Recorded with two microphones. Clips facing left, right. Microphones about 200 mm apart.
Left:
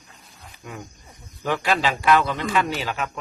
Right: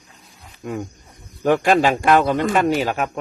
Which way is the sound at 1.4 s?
50° right (ahead or behind).